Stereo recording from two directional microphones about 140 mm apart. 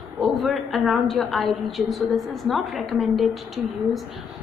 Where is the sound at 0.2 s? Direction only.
Centre (ahead or behind).